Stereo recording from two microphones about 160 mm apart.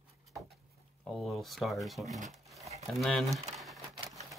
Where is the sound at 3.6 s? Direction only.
Centre (ahead or behind).